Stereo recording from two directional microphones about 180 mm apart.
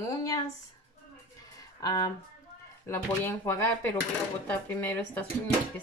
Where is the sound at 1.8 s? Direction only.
20° left (ahead or behind).